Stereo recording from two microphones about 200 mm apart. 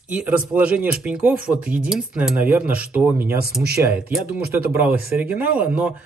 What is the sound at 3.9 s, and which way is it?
Speech, 5° right (ahead or behind).